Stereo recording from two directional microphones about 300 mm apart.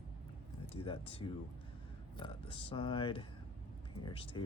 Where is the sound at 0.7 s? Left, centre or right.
Centre.